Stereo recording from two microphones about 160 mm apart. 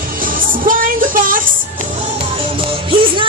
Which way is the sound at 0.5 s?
60° right (ahead or behind).